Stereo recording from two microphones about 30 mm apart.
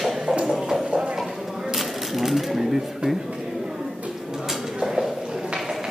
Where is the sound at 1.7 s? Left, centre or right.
Centre.